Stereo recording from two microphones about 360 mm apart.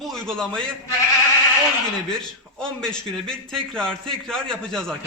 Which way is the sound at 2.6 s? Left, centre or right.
Centre.